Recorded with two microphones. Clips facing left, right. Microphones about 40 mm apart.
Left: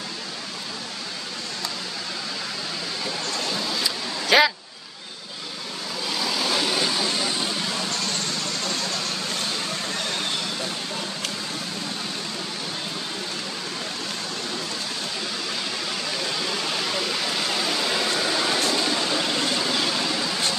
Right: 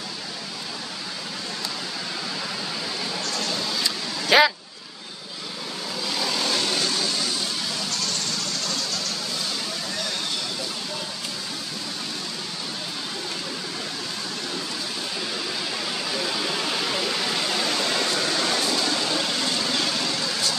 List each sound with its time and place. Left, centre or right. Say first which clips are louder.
3.3 s vehicle: left 1 dB; centre
6.0 s vehicle: left 1 dB; centre; by 8.2 s left
16.1 s waterfall: right 1 dB; centre
18.7 s vehicle: left 1 dB; centre